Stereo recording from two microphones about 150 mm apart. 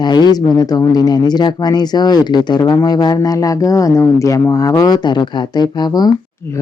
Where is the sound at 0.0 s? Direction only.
30° left (ahead or behind).